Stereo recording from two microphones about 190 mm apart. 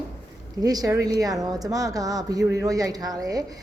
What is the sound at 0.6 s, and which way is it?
A woman's voice, 20° right (ahead or behind).